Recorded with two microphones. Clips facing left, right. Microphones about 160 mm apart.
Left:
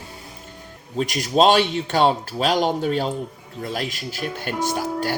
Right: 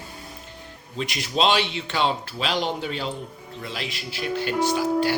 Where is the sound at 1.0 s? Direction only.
45° left (ahead or behind).